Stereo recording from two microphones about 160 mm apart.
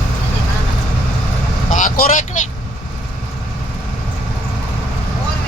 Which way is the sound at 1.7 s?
55° left (ahead or behind).